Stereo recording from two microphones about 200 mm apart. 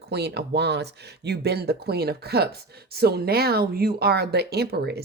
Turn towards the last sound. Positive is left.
turn(degrees=-55)  # may be behind; listen again after turning